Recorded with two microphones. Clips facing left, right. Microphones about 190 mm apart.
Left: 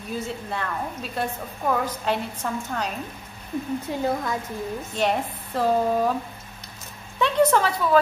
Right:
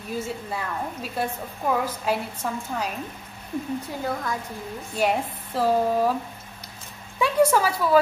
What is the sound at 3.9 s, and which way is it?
Speech, 25° left (ahead or behind).